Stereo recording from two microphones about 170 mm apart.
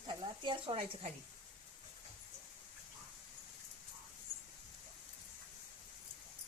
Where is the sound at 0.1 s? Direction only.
30° right (ahead or behind).